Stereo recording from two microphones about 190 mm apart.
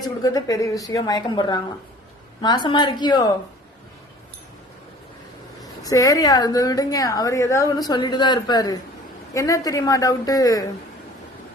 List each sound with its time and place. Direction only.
0.0 s a woman's voice: 20° left (ahead or behind)
5.8 s a woman's voice: 20° left (ahead or behind)